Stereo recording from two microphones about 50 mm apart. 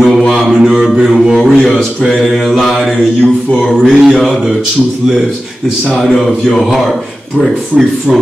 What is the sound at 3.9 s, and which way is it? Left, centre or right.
Mantra, centre.